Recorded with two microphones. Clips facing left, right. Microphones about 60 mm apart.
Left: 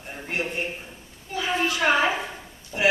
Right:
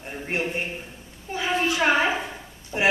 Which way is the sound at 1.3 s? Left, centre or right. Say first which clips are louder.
Right 1 dB; right.